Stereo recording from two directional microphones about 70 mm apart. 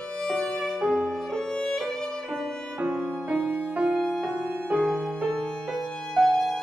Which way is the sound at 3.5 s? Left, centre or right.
Centre.